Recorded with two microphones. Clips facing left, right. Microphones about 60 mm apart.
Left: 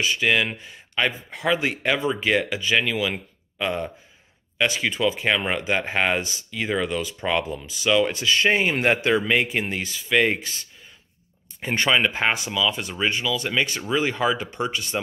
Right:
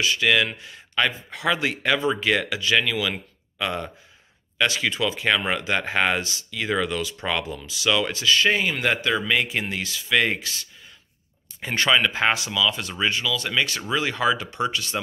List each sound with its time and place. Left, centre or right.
0.1 s speech: centre
11.7 s speech: centre
12.1 s speech: centre